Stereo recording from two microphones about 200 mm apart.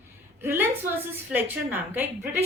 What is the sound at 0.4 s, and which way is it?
A woman's voice, 10° right (ahead or behind).